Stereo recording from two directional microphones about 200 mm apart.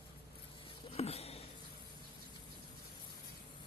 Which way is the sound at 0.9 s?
30° left (ahead or behind).